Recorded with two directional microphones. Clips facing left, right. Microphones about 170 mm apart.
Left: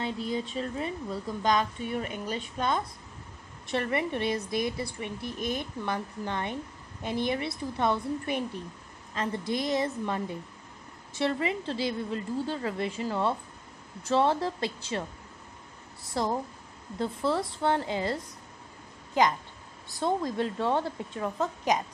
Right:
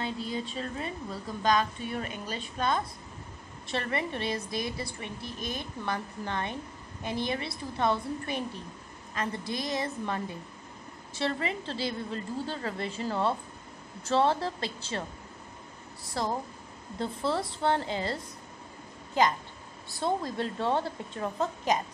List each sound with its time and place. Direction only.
0.0 s a woman's voice: 20° left (ahead or behind)
16.1 s a woman's voice: 20° left (ahead or behind)
19.9 s a woman's voice: 15° left (ahead or behind)